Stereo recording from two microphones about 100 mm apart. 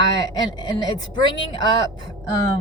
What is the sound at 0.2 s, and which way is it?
Speech, 45° left (ahead or behind).